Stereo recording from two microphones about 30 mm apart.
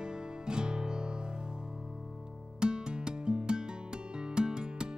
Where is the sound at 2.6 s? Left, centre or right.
Right.